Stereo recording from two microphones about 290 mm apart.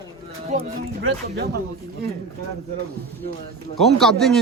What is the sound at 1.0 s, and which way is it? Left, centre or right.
Speech, right.